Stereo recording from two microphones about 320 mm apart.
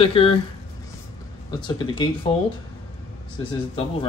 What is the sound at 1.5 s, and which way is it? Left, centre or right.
Speech, centre.